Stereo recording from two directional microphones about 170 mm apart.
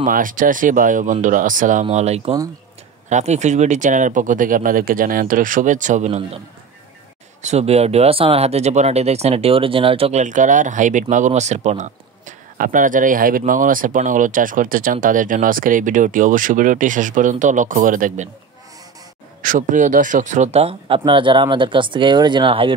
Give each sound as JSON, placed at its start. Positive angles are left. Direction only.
{"t": 0.0, "sound": "speech", "side_deg": -55}
{"t": 7.4, "sound": "speech", "side_deg": -40}
{"t": 19.4, "sound": "speech", "side_deg": -50}